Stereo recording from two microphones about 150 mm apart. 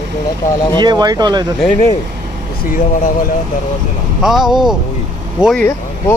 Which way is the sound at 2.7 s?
60° left (ahead or behind).